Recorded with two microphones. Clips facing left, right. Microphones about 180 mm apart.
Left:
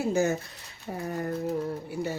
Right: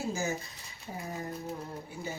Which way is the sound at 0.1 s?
65° left (ahead or behind).